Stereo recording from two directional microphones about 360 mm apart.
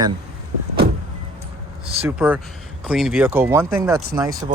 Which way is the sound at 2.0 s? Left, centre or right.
Centre.